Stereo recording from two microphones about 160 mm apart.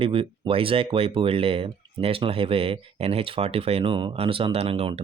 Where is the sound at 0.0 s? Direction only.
35° right (ahead or behind).